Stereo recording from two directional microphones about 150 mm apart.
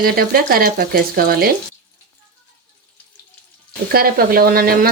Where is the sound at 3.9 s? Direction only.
85° right.